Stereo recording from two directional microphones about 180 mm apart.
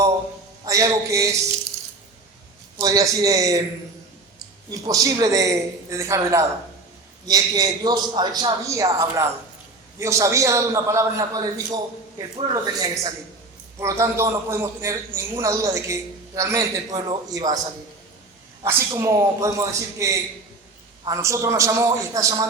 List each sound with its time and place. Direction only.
0.6 s a man's voice: 20° right (ahead or behind)
2.7 s a man's voice: 20° right (ahead or behind)
4.7 s a man's voice: 20° right (ahead or behind)
18.6 s a man's voice: 15° right (ahead or behind)